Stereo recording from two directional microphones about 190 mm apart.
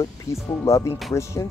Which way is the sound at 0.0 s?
15° left (ahead or behind).